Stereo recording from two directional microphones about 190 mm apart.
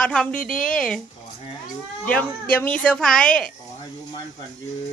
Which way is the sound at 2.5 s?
5° left (ahead or behind).